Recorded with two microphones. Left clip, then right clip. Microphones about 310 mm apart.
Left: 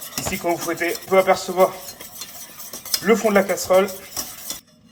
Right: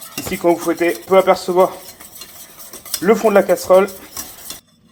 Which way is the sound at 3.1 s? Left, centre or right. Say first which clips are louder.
Right 5 dB; right.